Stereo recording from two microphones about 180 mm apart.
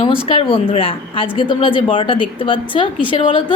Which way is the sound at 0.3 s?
30° left (ahead or behind).